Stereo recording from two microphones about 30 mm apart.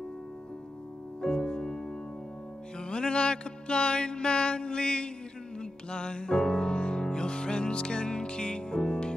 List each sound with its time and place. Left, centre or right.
1.2 s music: left
2.8 s music: left